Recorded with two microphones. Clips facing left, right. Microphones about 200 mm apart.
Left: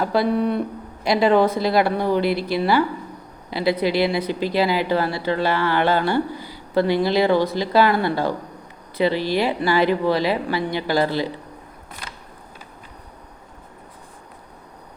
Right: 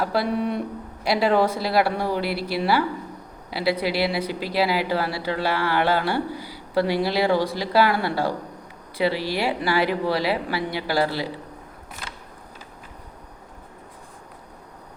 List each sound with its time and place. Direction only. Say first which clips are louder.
0.0 s speech: left 4 dB; 5° right (ahead or behind)